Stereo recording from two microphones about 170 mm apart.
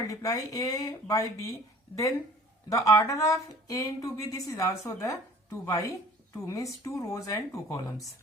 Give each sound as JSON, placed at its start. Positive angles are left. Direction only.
{"t": 0.1, "sound": "speech", "side_deg": 20}
{"t": 2.6, "sound": "speech", "side_deg": 20}